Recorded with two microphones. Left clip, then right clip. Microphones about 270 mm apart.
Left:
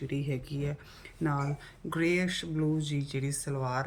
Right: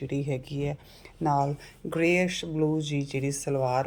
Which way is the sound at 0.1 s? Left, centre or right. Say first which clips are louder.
Right 5 dB; centre.